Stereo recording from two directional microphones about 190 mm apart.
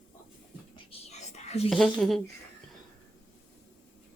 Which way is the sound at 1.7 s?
Centre (ahead or behind).